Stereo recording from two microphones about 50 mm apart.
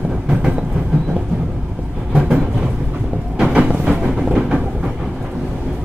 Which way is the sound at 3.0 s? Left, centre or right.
Centre.